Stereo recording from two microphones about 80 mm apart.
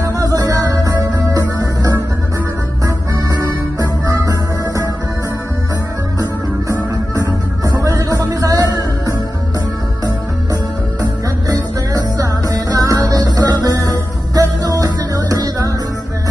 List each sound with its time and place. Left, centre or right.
0.0 s music: right
7.8 s music: right